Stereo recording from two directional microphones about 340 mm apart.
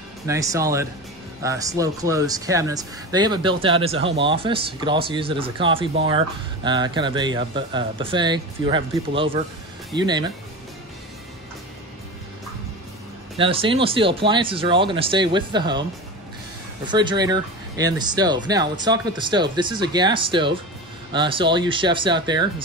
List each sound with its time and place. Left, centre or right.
0.3 s speech: centre
13.4 s speech: centre
16.8 s speech: centre